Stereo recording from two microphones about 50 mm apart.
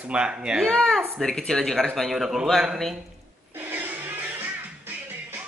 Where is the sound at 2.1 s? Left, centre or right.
Centre.